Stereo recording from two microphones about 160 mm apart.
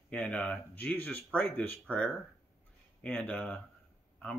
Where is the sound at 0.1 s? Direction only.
10° left (ahead or behind).